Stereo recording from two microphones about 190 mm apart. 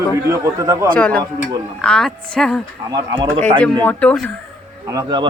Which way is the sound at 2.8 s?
20° right (ahead or behind).